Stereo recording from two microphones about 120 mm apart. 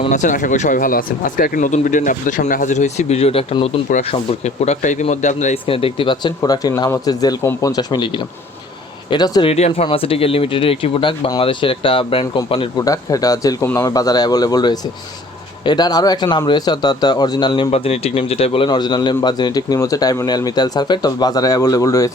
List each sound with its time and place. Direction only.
0.1 s speech: 90° left
5.6 s a man's voice: 50° left (ahead or behind); by 9.5 s 35° left (ahead or behind)
9.5 s speech: 60° left (ahead or behind)
12.7 s a man's voice: 30° left (ahead or behind)
17.7 s a man's voice: 60° left (ahead or behind); by 22.1 s 25° left (ahead or behind)